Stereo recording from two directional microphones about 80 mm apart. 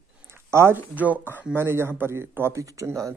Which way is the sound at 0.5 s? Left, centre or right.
Right.